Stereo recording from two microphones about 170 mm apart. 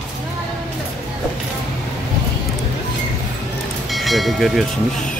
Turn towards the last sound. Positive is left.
turn(degrees=0)  # may be behind; listen again after turning